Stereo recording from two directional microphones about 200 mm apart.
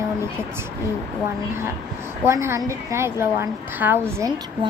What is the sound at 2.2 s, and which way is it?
A woman's voice, 15° right (ahead or behind).